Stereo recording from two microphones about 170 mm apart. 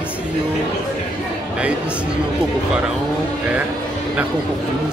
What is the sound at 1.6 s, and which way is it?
Speech, 5° right (ahead or behind).